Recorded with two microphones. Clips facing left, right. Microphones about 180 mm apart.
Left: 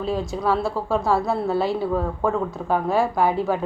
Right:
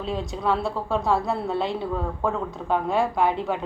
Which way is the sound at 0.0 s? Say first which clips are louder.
Left 3 dB; centre (ahead or behind).